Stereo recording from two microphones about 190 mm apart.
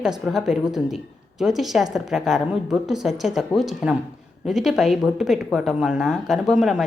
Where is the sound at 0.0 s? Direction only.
Centre (ahead or behind).